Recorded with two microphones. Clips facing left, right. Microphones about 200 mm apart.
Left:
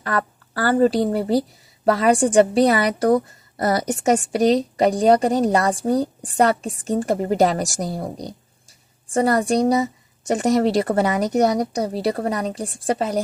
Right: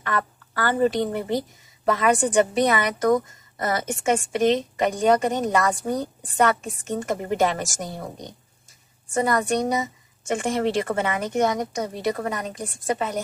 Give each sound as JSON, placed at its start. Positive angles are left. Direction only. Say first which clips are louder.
{"t": 0.0, "sound": "a woman's voice", "louder": "left 3 dB", "side_deg": 35}